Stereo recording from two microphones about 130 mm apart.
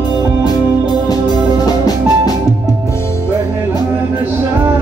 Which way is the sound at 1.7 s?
30° left (ahead or behind).